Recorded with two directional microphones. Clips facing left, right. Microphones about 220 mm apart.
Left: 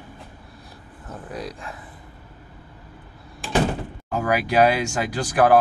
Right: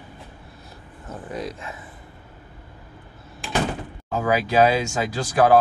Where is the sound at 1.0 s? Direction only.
Centre (ahead or behind).